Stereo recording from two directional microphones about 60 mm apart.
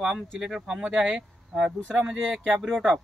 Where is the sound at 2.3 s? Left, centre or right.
Centre.